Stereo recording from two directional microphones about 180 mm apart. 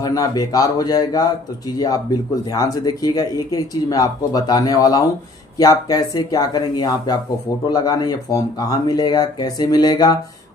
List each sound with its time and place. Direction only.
0.0 s speech: 20° left (ahead or behind)